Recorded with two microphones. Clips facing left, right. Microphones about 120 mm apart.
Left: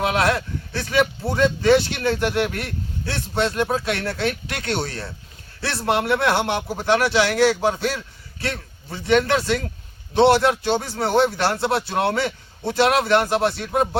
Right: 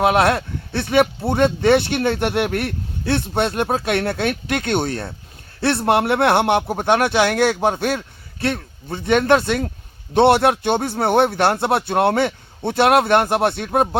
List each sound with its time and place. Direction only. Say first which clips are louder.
0.0 s speech: right 4 dB; 60° right (ahead or behind)